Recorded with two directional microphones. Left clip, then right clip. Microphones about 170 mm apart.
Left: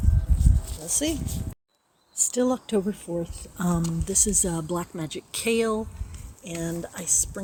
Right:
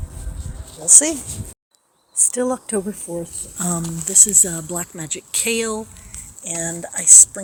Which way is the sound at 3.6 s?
20° left (ahead or behind).